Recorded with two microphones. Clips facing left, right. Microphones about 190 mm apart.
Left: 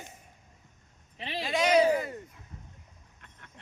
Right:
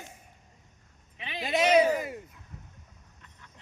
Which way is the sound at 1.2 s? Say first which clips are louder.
Left 3 dB; 35° left (ahead or behind).